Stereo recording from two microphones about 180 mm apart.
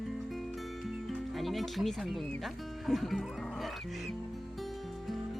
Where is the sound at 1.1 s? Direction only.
Centre (ahead or behind).